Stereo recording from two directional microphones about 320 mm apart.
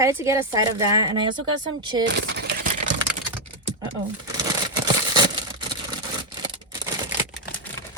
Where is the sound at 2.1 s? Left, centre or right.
Right.